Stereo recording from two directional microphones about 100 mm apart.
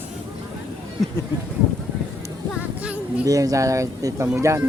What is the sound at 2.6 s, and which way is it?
Music, 15° right (ahead or behind).